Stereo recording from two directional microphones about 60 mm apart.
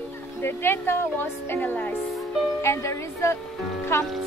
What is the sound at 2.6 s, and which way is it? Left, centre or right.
Speech, left.